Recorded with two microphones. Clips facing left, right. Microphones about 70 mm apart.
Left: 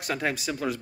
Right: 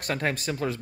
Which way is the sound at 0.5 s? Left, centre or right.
Right.